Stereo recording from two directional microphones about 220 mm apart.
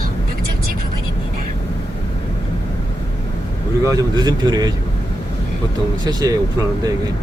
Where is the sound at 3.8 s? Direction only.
20° right (ahead or behind).